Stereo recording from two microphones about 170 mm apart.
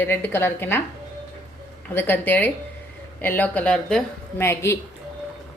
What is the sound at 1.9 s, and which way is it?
A woman's voice, 10° left (ahead or behind).